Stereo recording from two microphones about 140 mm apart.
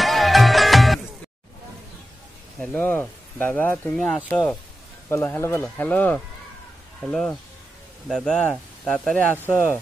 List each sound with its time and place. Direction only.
0.0 s music: centre (ahead or behind)
2.6 s speech: 10° left (ahead or behind)
5.1 s speech: 15° left (ahead or behind)